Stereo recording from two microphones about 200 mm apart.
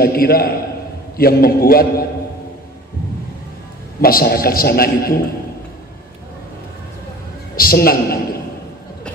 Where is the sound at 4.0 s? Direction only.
50° left (ahead or behind).